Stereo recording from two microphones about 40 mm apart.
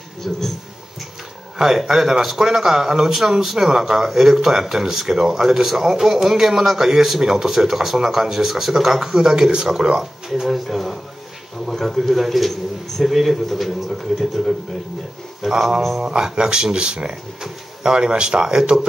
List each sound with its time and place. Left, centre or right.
0.2 s a man's voice: centre
1.6 s a man's voice: centre
10.5 s a man's voice: centre
15.4 s speech: centre
16.0 s speech: right
17.1 s speech: centre